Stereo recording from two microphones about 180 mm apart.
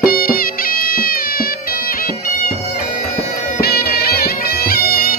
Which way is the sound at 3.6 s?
60° left (ahead or behind).